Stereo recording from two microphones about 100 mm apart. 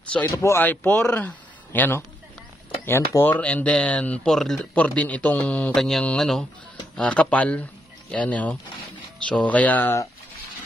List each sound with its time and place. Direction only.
0.4 s speech: 30° left (ahead or behind)
0.7 s a man's voice: 15° left (ahead or behind)